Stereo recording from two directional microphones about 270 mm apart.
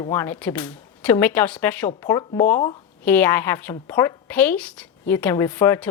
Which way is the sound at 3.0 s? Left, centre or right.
Centre.